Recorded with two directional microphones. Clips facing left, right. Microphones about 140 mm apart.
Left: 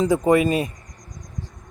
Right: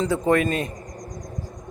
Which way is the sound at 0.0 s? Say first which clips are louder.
Left 3 dB; 10° left (ahead or behind).